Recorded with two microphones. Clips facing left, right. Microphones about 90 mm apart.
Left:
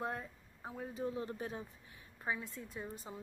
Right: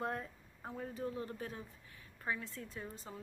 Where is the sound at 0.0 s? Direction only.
5° left (ahead or behind).